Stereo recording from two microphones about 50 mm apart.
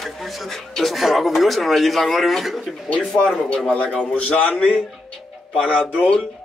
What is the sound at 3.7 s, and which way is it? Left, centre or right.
A man's voice, left.